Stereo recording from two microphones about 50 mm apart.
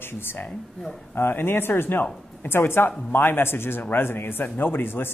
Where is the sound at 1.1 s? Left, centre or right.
Left.